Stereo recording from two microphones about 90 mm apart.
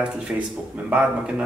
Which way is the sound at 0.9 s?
15° right (ahead or behind).